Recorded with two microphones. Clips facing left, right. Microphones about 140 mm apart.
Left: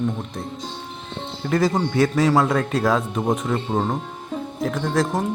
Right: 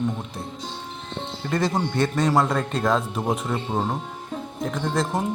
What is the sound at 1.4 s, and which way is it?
Speech, centre (ahead or behind).